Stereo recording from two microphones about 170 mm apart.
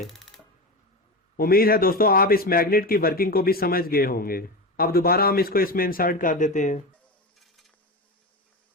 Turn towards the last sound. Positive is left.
turn(degrees=45)  # may be behind; listen again after turning